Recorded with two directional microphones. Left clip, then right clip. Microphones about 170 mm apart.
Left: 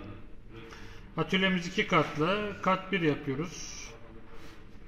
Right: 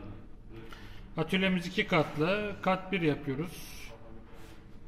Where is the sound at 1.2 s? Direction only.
5° left (ahead or behind).